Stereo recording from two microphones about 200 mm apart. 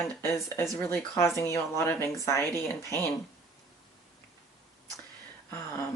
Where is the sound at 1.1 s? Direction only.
15° left (ahead or behind).